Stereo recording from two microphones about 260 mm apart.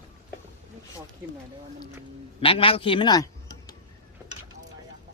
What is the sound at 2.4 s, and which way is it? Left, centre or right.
Speech, left.